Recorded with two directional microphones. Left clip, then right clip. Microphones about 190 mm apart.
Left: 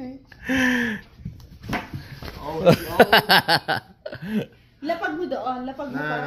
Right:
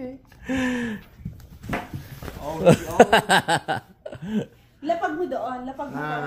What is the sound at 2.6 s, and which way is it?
Speech, 20° right (ahead or behind).